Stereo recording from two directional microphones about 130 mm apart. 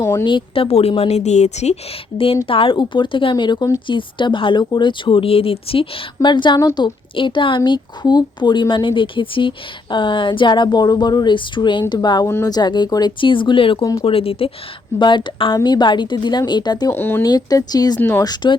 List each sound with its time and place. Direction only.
0.0 s a woman's voice: 20° left (ahead or behind)
0.3 s a woman's voice: 40° left (ahead or behind)
6.2 s a woman's voice: 35° left (ahead or behind)
16.9 s speech: 15° left (ahead or behind)
17.2 s a woman's voice: 30° left (ahead or behind)